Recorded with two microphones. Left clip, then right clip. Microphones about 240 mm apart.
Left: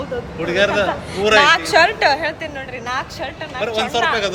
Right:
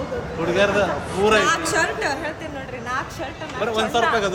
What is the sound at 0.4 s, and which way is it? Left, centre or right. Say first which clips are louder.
Speech: left 2 dB; centre.